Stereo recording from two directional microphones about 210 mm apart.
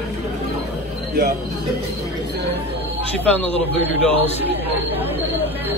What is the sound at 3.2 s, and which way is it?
Speech, 5° left (ahead or behind).